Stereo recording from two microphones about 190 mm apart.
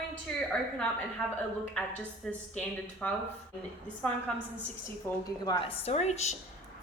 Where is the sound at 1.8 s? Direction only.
5° left (ahead or behind).